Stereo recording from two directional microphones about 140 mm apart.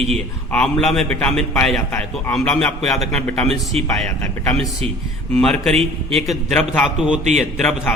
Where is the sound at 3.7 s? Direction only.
45° right (ahead or behind).